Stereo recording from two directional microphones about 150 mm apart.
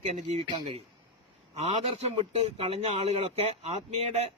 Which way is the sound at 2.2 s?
40° right (ahead or behind).